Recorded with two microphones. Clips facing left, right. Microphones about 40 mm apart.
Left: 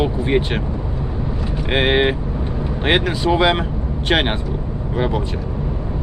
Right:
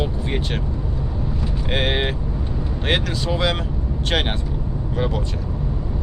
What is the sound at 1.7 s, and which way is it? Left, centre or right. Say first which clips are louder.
Speech: left 6 dB; left.